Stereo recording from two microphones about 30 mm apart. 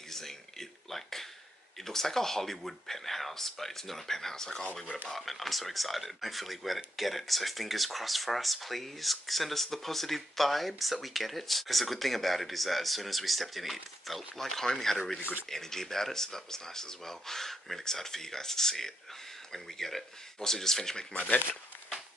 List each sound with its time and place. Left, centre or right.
0.1 s a sound: centre
1.9 s speech: centre
5.1 s speech: centre
21.1 s speech: left